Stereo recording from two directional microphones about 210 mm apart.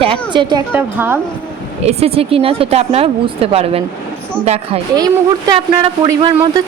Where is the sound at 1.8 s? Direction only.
30° right (ahead or behind).